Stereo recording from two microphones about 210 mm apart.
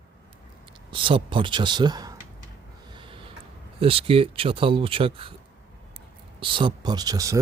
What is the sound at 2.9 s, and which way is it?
Snort, 25° right (ahead or behind).